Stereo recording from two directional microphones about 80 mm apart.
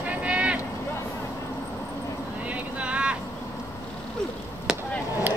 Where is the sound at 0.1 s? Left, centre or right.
Centre.